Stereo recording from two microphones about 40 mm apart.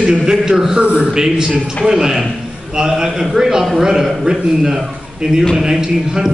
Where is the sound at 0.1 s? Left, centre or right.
Centre.